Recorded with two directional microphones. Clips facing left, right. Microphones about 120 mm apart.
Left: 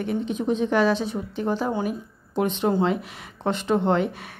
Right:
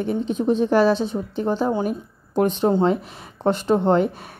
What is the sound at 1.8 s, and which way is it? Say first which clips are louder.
A woman's voice: right 3 dB; 45° right (ahead or behind).